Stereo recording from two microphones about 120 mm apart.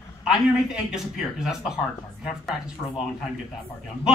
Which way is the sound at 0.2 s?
5° right (ahead or behind).